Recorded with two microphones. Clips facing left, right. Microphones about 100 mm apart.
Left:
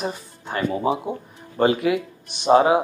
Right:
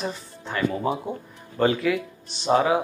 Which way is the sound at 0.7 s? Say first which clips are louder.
Left 3 dB; 15° left (ahead or behind).